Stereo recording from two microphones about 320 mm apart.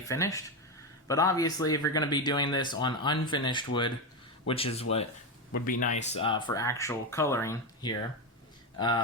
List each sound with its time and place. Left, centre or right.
0.1 s speech: centre